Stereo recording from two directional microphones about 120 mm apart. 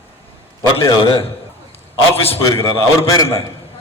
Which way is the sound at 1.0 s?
50° left (ahead or behind).